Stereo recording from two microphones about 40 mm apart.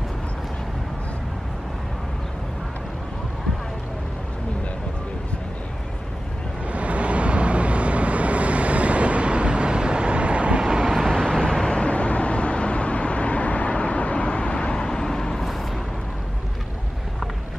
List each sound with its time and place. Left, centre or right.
6.7 s vehicle: right
10.6 s vehicle: centre
11.1 s vehicle: centre
14.9 s vehicle: centre